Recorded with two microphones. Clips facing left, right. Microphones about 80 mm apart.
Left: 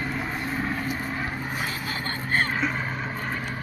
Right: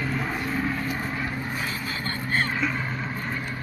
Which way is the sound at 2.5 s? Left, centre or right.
Left.